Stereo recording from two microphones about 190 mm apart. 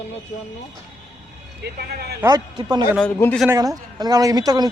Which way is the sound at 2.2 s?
20° right (ahead or behind).